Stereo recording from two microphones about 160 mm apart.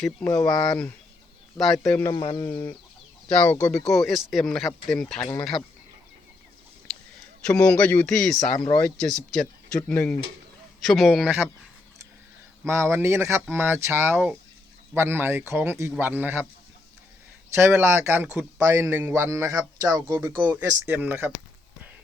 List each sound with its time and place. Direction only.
0.3 s speech: 25° left (ahead or behind)
1.5 s speech: centre (ahead or behind)
1.9 s speech: 15° left (ahead or behind)
2.1 s speech: 30° left (ahead or behind)
3.7 s speech: 5° left (ahead or behind)
7.4 s a man's voice: 5° left (ahead or behind)
12.6 s a man's voice: 15° right (ahead or behind)
17.5 s a man's voice: 15° right (ahead or behind)